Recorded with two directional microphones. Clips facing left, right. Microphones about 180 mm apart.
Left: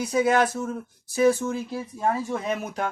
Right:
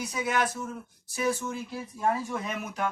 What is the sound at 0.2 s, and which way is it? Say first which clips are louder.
Speech: left 8 dB; 30° left (ahead or behind).